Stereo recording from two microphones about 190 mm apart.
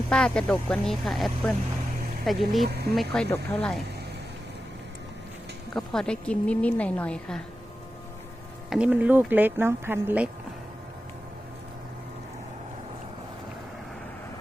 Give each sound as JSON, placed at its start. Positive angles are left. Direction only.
{"t": 0.1, "sound": "a woman's voice", "side_deg": 5}
{"t": 2.6, "sound": "speech", "side_deg": -55}
{"t": 2.9, "sound": "a woman's voice", "side_deg": 0}
{"t": 5.7, "sound": "a woman's voice", "side_deg": 0}
{"t": 8.7, "sound": "speech", "side_deg": -5}